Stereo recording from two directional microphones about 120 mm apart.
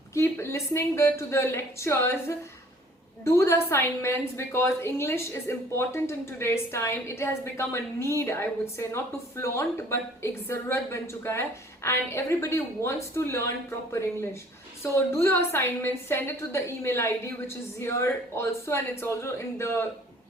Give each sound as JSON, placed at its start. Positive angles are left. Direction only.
{"t": 0.1, "sound": "a woman's voice", "side_deg": 20}